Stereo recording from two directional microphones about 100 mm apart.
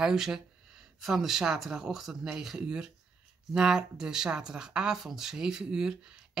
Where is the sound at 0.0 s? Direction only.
5° right (ahead or behind).